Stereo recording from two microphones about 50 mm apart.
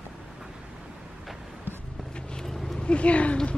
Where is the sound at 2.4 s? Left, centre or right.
Centre.